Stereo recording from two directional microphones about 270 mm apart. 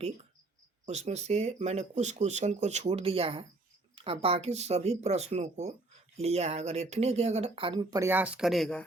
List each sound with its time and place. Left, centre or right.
0.9 s speech: right; by 8.8 s centre